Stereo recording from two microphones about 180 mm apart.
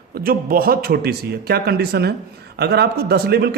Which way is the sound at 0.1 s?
55° right (ahead or behind).